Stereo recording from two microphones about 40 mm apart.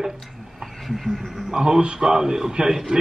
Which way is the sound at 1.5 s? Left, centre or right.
Centre.